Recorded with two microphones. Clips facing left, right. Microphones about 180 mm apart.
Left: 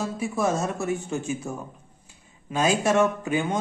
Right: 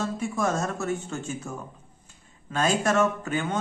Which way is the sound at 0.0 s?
5° left (ahead or behind).